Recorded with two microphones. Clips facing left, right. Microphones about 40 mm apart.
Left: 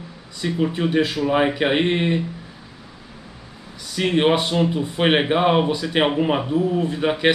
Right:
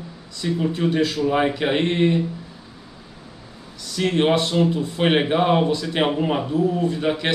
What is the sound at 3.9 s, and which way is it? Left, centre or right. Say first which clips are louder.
Speech: left 1 dB; centre.